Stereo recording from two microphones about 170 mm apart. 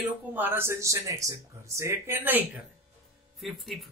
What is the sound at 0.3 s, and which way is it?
Speech, 10° right (ahead or behind).